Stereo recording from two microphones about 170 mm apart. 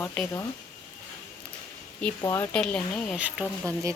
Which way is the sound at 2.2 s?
20° left (ahead or behind).